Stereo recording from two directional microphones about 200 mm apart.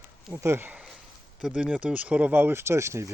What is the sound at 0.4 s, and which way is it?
Speech, 10° right (ahead or behind).